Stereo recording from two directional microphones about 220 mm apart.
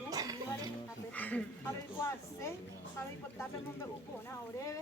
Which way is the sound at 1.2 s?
5° left (ahead or behind).